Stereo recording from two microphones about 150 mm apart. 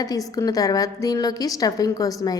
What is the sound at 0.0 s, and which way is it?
A woman's voice, 25° left (ahead or behind).